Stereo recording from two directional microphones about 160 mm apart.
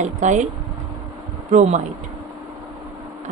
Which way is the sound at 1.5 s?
50° right (ahead or behind).